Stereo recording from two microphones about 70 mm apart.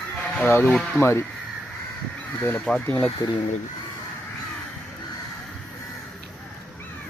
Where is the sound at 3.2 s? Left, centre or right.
Left.